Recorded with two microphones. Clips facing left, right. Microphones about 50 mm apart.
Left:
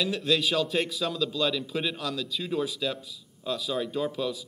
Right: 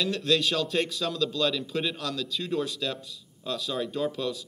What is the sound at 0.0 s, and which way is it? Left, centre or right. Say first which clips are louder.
A man's voice: even; centre.